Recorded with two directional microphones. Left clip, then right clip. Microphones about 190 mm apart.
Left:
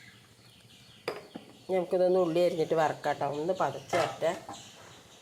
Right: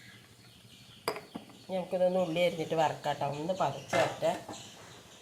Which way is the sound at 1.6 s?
35° left (ahead or behind).